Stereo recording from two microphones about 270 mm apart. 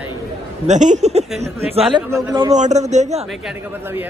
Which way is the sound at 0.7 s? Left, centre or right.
Right.